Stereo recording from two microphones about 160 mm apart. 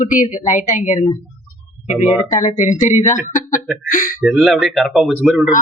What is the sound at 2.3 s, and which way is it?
A woman's voice, 45° left (ahead or behind).